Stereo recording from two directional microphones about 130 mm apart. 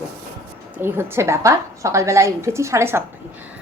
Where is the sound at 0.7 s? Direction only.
20° right (ahead or behind).